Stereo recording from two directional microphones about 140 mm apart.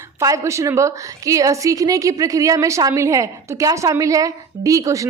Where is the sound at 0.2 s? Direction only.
25° right (ahead or behind).